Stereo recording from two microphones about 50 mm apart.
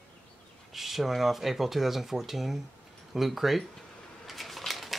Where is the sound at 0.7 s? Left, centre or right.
Centre.